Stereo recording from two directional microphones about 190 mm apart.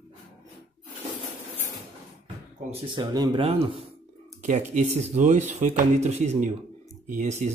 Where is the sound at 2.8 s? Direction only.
25° right (ahead or behind); by 7.5 s 40° right (ahead or behind).